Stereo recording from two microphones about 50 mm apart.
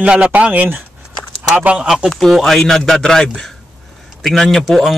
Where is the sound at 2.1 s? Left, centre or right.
Centre.